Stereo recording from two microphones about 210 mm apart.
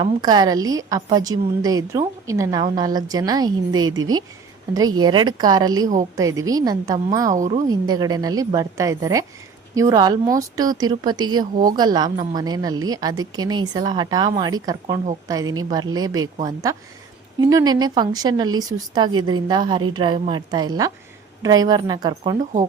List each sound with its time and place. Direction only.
0.0 s a woman's voice: 20° right (ahead or behind)
4.9 s a woman's voice: 20° right (ahead or behind)
7.3 s a woman's voice: 35° right (ahead or behind)
7.7 s a woman's voice: 20° right (ahead or behind)